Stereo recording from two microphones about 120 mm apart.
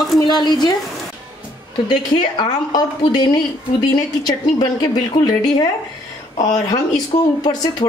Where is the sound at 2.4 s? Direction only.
35° left (ahead or behind).